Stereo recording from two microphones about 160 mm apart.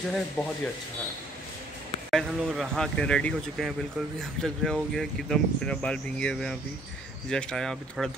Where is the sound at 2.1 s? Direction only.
Centre (ahead or behind).